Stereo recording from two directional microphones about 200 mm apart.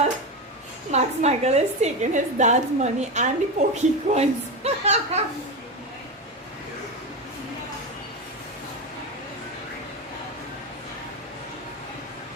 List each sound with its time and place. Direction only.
0.9 s a woman's voice: 35° right (ahead or behind)